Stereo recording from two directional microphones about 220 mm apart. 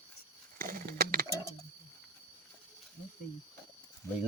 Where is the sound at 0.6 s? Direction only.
40° right (ahead or behind).